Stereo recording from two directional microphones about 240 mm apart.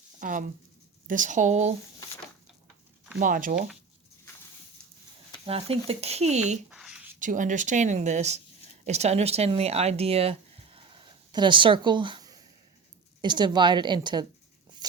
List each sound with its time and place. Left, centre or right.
0.2 s speech: right
3.2 s speech: right
5.5 s speech: right
6.7 s a sound: centre
7.2 s speech: right
10.8 s a sound: centre
13.2 s speech: centre